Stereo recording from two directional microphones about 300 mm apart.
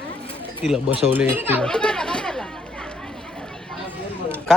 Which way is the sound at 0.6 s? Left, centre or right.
Centre.